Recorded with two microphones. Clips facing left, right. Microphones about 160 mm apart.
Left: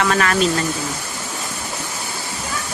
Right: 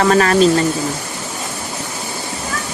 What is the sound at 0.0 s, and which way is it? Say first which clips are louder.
Speech: right 5 dB; 35° right (ahead or behind).